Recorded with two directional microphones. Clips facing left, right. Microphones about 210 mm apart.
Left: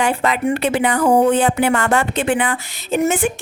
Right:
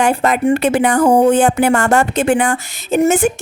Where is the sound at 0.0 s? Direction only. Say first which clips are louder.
Right 4 dB; 45° right (ahead or behind).